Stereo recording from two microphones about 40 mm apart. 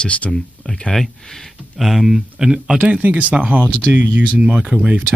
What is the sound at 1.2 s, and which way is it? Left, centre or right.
Speech, centre.